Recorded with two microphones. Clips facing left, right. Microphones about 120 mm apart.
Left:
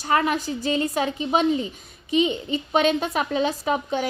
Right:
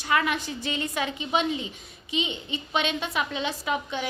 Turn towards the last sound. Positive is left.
turn(degrees=40)  # may be behind; listen again after turning